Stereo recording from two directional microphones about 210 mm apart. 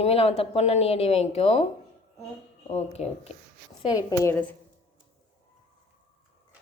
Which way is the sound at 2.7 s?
30° left (ahead or behind).